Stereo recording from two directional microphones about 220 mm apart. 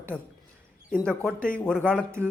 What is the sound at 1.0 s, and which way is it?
Speech, 5° left (ahead or behind).